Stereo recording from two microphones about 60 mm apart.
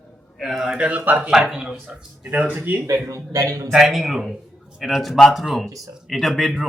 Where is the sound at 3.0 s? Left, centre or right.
Right.